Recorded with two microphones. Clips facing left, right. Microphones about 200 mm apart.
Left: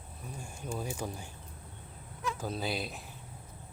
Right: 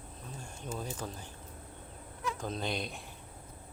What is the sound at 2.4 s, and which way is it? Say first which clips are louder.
Speech: left 1 dB; 5° left (ahead or behind).